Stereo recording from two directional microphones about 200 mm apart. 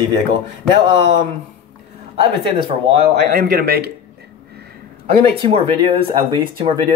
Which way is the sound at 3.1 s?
50° right (ahead or behind).